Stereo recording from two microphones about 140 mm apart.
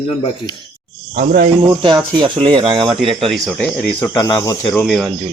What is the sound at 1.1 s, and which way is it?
Speech, 70° right (ahead or behind).